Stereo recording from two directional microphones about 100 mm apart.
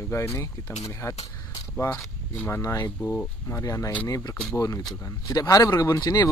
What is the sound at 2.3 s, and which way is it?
Speech, 25° left (ahead or behind).